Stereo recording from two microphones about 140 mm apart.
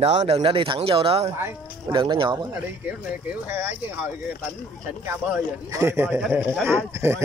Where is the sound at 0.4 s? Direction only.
40° right (ahead or behind).